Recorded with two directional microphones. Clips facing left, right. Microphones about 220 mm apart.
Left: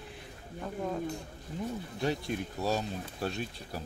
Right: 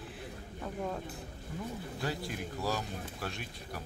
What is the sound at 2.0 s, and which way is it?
Speech, 25° left (ahead or behind).